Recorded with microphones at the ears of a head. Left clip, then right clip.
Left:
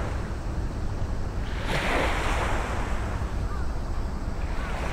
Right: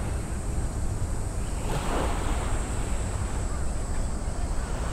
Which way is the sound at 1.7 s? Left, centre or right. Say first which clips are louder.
Left 5 dB; left.